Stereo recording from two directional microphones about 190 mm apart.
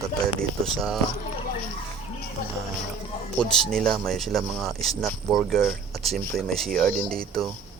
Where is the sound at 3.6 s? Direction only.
5° left (ahead or behind).